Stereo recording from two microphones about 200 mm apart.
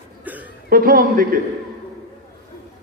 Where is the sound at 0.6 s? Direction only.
45° right (ahead or behind).